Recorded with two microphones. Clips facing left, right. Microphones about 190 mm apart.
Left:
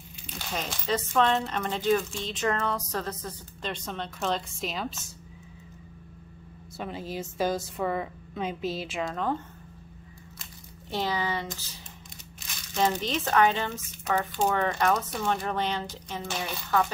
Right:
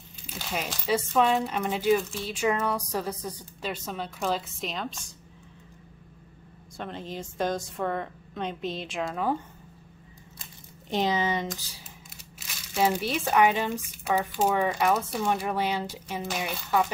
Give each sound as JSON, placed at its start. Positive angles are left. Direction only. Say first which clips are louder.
{"t": 0.3, "sound": "speech", "louder": "right 1 dB", "side_deg": -5}
{"t": 6.8, "sound": "a woman's voice", "louder": "left 1 dB", "side_deg": 5}
{"t": 10.4, "sound": "a sound", "louder": "left 1 dB", "side_deg": -20}
{"t": 12.4, "sound": "speech", "louder": "right 1 dB", "side_deg": -10}